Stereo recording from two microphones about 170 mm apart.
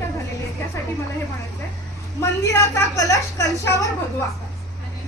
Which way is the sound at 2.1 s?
20° left (ahead or behind).